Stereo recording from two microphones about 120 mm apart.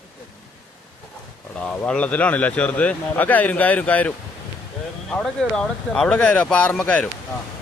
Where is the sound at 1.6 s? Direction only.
10° left (ahead or behind).